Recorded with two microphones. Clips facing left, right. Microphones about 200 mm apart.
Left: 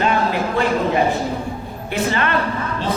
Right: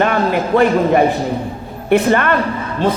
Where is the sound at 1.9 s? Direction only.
55° right (ahead or behind).